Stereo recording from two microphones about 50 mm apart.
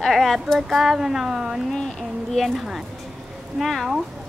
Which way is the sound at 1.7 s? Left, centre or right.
Centre.